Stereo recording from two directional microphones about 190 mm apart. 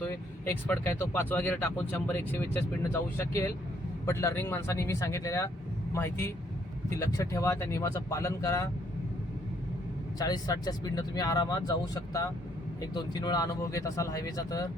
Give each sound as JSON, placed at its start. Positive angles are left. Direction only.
{"t": 0.0, "sound": "speech", "side_deg": 10}
{"t": 10.2, "sound": "speech", "side_deg": 20}